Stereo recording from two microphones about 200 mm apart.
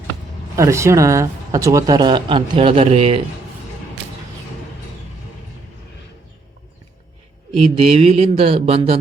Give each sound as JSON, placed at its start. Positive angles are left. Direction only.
{"t": 0.5, "sound": "speech", "side_deg": -15}
{"t": 7.5, "sound": "speech", "side_deg": -30}